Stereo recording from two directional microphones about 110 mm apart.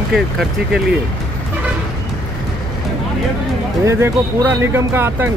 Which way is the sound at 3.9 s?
25° right (ahead or behind).